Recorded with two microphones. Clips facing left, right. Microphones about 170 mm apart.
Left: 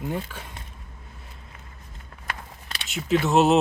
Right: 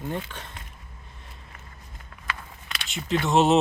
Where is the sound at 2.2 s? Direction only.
35° left (ahead or behind).